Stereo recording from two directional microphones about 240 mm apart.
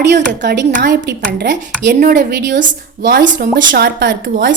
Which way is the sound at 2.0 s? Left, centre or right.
Right.